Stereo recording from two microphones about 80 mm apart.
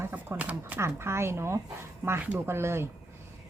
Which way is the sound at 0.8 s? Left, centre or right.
Right.